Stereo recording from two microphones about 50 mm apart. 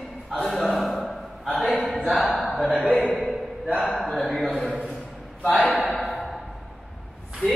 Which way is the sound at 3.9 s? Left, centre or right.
Centre.